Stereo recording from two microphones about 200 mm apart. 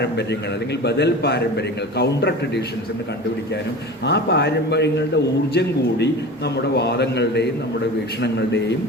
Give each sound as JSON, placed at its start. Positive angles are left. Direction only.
{"t": 0.0, "sound": "a man's voice", "side_deg": 60}
{"t": 4.0, "sound": "a man's voice", "side_deg": 55}